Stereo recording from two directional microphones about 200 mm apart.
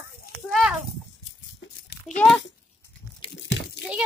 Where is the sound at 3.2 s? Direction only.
25° left (ahead or behind).